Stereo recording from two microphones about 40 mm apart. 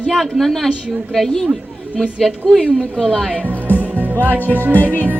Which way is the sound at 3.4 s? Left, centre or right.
Right.